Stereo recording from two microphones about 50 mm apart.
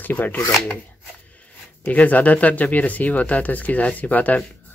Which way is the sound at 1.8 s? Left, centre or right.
Left.